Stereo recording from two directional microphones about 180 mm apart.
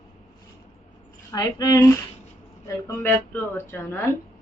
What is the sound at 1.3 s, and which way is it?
A woman's voice, 20° left (ahead or behind).